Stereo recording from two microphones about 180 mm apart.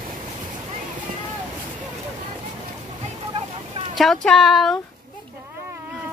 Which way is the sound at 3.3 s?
30° right (ahead or behind).